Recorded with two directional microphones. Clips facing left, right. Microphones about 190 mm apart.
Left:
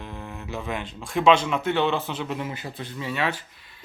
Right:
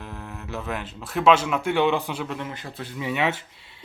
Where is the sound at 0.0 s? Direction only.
5° right (ahead or behind).